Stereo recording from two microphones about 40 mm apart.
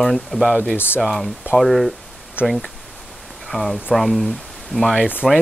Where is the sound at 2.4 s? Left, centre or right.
Left.